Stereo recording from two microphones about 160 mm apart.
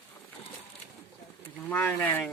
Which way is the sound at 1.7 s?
10° left (ahead or behind).